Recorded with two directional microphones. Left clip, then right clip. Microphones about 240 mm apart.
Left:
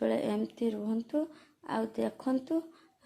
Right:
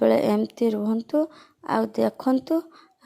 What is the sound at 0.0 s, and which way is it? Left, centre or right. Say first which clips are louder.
Speech: right 11 dB; right.